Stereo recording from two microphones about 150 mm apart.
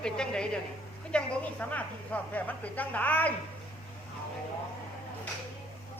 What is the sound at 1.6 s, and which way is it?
Speech, 10° left (ahead or behind).